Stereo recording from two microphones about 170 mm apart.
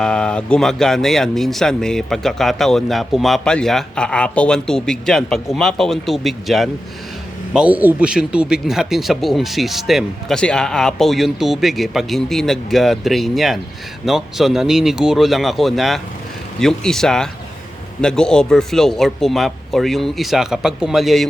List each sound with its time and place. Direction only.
0.0 s speech: 5° left (ahead or behind)